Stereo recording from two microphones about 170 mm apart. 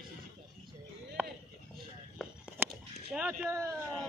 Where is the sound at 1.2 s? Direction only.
10° right (ahead or behind).